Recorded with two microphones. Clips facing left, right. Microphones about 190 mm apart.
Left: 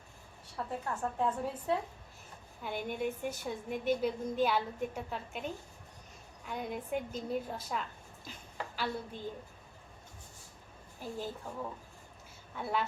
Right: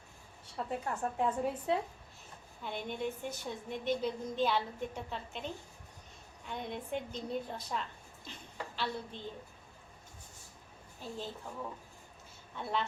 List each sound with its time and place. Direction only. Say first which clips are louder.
0.5 s a woman's voice: right 1 dB; 20° right (ahead or behind)
2.6 s a woman's voice: left 2 dB; 10° left (ahead or behind)
6.5 s a woman's voice: left 2 dB; 5° left (ahead or behind)
11.0 s a woman's voice: left 2 dB; 10° left (ahead or behind)